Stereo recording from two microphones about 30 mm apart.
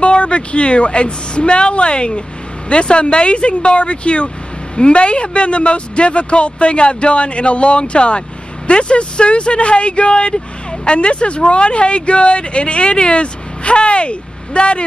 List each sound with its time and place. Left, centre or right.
0.0 s a woman's voice: left